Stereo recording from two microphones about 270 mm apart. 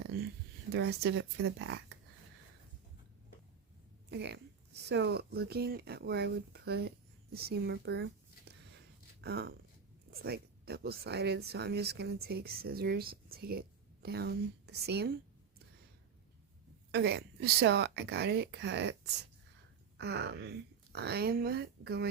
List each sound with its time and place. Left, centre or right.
0.7 s speech: right
4.1 s speech: right
7.3 s a sound: right
9.2 s speech: right
16.9 s speech: right